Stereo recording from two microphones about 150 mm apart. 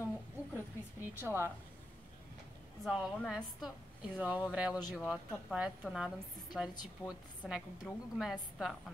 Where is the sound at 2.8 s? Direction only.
Centre (ahead or behind).